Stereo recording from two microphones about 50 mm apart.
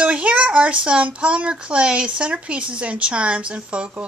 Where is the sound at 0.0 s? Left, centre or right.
Right.